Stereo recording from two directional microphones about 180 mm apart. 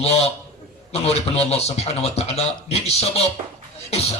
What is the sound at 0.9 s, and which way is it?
Music, 35° left (ahead or behind).